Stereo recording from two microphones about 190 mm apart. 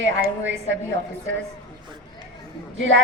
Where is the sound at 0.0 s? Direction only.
75° right (ahead or behind).